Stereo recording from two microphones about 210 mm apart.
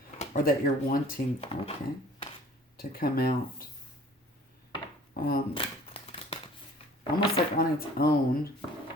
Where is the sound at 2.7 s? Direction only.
45° left (ahead or behind).